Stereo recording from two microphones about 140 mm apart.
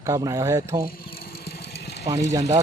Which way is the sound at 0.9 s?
90° left.